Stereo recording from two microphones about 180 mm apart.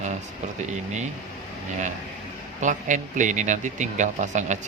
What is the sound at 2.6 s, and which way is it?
A man's voice, 45° right (ahead or behind).